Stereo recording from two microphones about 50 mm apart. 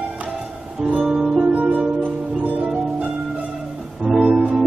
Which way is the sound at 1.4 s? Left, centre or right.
Right.